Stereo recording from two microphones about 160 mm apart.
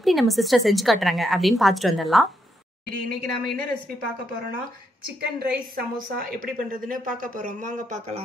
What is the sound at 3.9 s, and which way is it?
A woman's voice, 65° right (ahead or behind).